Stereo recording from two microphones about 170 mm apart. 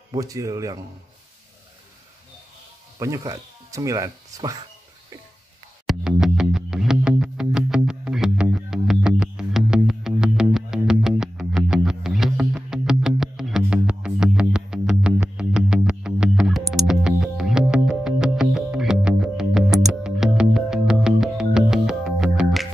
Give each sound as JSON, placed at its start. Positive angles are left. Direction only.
{"t": 0.1, "sound": "speech", "side_deg": -20}
{"t": 3.0, "sound": "speech", "side_deg": -20}
{"t": 5.9, "sound": "music", "side_deg": -5}